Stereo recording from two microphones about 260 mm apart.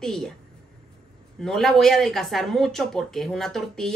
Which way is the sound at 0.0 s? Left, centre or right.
Centre.